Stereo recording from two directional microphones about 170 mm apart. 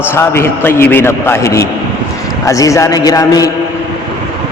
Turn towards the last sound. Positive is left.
turn(degrees=20)  # may be behind; listen again after turning